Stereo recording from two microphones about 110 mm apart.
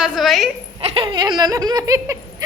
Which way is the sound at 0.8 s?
60° right (ahead or behind).